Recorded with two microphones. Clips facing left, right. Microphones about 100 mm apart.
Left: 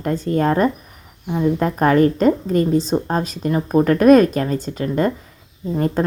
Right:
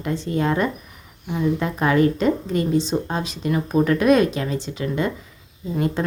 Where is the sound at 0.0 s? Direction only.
45° left (ahead or behind).